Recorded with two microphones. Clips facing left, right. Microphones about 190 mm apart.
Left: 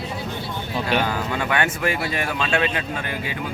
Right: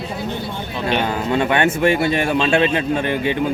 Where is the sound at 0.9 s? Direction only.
25° right (ahead or behind).